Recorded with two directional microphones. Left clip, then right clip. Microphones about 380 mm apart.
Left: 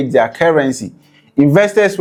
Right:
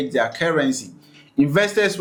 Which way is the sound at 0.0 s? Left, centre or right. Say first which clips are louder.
Left 9 dB; left.